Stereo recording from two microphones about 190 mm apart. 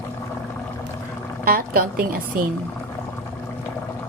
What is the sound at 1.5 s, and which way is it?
Speech, 50° right (ahead or behind).